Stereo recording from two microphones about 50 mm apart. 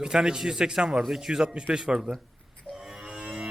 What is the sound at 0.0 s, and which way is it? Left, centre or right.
Speech, centre.